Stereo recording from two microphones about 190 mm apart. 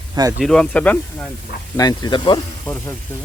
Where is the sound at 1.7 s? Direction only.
20° left (ahead or behind).